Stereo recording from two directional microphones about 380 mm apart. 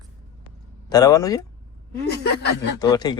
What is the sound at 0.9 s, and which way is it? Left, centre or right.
Speech, centre.